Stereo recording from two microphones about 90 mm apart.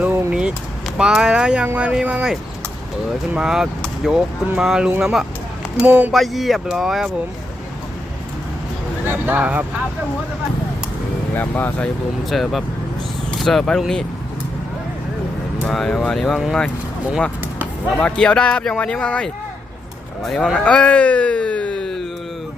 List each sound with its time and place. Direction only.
0.0 s vehicle: 15° right (ahead or behind)
0.9 s speech: 5° right (ahead or behind)
3.3 s speech: 5° right (ahead or behind)
6.1 s speech: centre (ahead or behind)
9.0 s speech: 20° right (ahead or behind)
11.3 s speech: 20° left (ahead or behind)
12.3 s speech: centre (ahead or behind)
15.6 s speech: 5° left (ahead or behind)
17.9 s speech: 10° left (ahead or behind)